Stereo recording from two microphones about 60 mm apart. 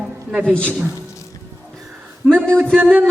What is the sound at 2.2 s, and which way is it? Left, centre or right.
Speech, centre.